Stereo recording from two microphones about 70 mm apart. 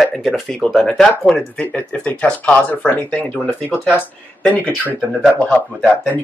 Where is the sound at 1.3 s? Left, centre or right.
Centre.